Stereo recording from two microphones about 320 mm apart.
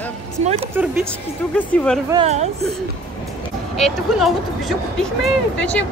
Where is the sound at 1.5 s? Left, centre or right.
Centre.